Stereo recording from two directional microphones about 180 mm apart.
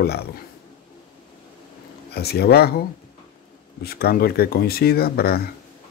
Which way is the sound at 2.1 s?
65° left (ahead or behind).